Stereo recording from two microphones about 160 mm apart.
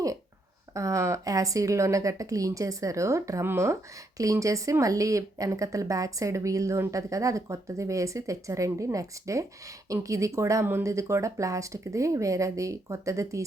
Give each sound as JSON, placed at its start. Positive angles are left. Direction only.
{"t": 0.7, "sound": "a woman's voice", "side_deg": -20}